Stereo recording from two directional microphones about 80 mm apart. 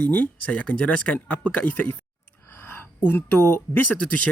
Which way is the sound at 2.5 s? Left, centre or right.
Left.